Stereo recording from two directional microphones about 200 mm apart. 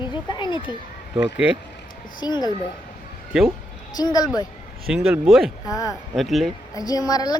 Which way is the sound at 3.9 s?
20° left (ahead or behind).